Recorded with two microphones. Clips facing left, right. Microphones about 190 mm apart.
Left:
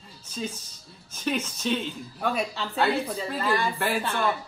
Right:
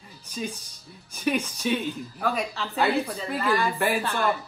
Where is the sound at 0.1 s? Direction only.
15° right (ahead or behind).